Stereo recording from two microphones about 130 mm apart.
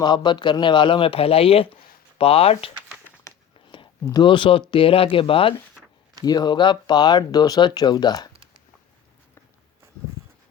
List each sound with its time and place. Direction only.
0.0 s speech: 35° left (ahead or behind)
3.5 s a sound: 40° left (ahead or behind)
4.0 s speech: 35° left (ahead or behind)
6.2 s speech: 30° left (ahead or behind)